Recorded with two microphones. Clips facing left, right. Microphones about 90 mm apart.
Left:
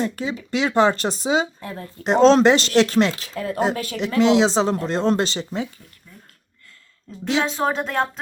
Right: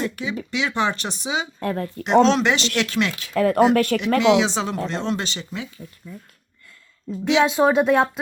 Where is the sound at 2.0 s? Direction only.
35° left (ahead or behind).